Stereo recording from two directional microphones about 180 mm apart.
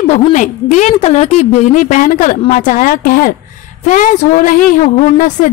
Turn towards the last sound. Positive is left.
turn(degrees=45)  # may be behind; listen again after turning